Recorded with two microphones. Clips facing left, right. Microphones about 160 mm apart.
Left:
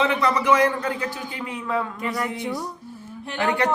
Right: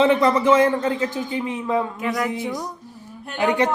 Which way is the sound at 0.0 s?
30° right (ahead or behind).